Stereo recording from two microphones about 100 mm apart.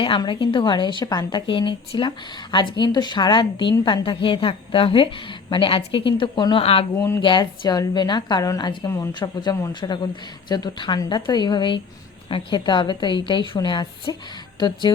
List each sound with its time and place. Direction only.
0.3 s speech: 55° left (ahead or behind)
6.6 s speech: 75° left (ahead or behind)
6.9 s speech: 25° left (ahead or behind)
7.2 s a man's voice: 50° left (ahead or behind); by 9.7 s 35° left (ahead or behind)
9.8 s speech: 50° left (ahead or behind)